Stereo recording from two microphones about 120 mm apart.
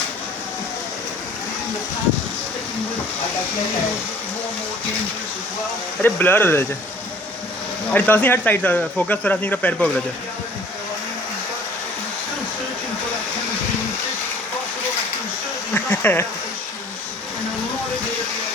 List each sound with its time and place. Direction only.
6.0 s speech: 15° left (ahead or behind)
7.9 s speech: 15° left (ahead or behind)
15.7 s insect: 15° left (ahead or behind)